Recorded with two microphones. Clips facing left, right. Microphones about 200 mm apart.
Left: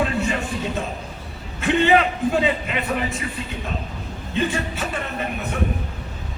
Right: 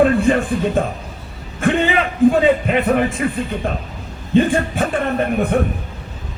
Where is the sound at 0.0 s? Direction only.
55° right (ahead or behind).